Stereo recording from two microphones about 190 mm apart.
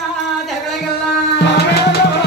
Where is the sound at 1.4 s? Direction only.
60° left (ahead or behind).